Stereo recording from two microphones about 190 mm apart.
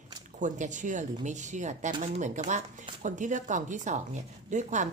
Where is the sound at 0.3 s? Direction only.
40° right (ahead or behind).